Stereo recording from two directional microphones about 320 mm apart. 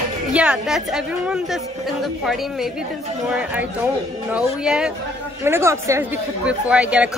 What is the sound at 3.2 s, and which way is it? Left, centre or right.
A woman's voice, centre.